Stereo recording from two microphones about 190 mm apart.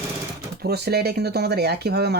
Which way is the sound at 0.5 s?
60° right (ahead or behind).